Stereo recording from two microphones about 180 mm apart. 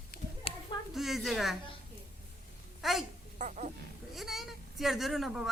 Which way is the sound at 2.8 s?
Centre (ahead or behind).